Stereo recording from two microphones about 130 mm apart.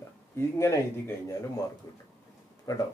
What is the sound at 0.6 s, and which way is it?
Speech, 20° left (ahead or behind).